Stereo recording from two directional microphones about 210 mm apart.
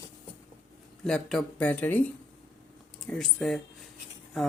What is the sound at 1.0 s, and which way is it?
Speech, centre (ahead or behind).